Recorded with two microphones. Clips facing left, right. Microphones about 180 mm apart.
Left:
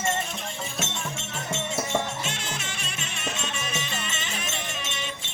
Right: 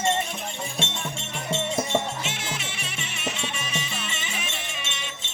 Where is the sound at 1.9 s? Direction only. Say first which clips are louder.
Right 2 dB; 5° right (ahead or behind).